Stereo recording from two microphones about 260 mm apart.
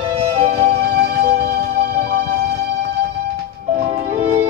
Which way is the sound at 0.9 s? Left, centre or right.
Right.